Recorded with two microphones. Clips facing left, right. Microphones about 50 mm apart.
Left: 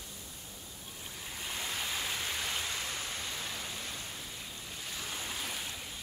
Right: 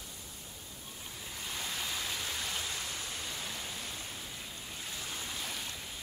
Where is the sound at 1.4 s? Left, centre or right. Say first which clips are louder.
Left 1 dB; centre.